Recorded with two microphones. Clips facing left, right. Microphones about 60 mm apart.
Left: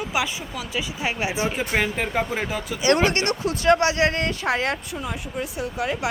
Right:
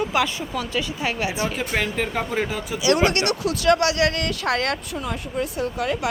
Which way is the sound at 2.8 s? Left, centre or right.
Left.